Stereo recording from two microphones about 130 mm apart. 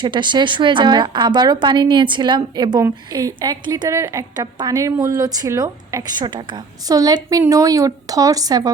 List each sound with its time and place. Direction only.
0.0 s a woman's voice: 35° right (ahead or behind)